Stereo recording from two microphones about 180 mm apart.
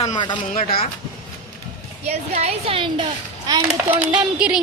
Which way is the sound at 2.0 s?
35° right (ahead or behind).